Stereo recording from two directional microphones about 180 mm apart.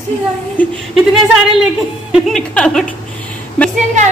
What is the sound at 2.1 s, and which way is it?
A woman's voice, 5° left (ahead or behind).